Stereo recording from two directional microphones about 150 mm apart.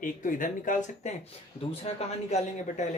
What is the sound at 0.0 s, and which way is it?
Speech, 60° left (ahead or behind).